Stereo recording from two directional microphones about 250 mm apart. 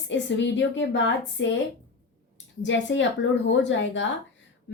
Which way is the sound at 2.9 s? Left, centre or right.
Left.